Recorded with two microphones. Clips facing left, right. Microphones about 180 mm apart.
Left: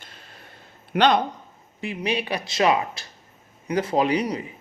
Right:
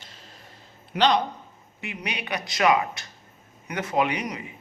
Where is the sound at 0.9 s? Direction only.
55° left (ahead or behind).